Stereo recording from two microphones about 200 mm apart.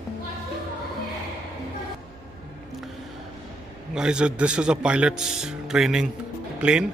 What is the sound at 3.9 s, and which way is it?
Speech, 5° right (ahead or behind).